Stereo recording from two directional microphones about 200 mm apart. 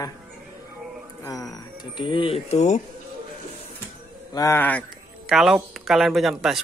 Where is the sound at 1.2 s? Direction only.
15° left (ahead or behind); by 2.8 s 35° left (ahead or behind).